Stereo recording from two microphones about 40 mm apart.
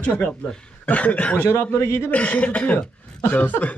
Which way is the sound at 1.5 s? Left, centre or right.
Left.